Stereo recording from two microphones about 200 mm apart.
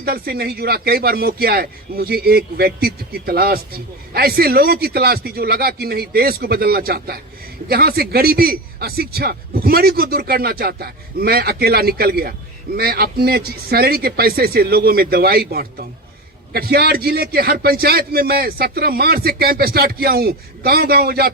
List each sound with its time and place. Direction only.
0.0 s speech: 50° right (ahead or behind)